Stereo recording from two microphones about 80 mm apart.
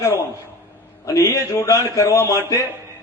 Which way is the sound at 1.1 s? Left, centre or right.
Left.